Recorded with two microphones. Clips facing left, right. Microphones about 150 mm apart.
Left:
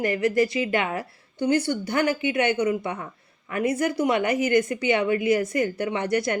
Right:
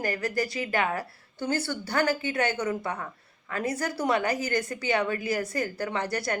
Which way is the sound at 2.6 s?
45° right (ahead or behind).